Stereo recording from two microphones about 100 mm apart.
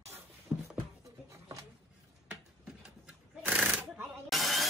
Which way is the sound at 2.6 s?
15° right (ahead or behind).